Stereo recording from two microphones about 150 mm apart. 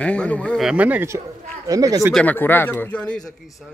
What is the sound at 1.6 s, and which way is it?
Speech, 25° right (ahead or behind).